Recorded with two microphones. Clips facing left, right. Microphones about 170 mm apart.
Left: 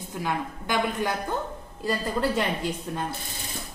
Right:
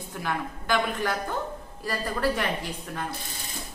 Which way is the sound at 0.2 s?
20° left (ahead or behind).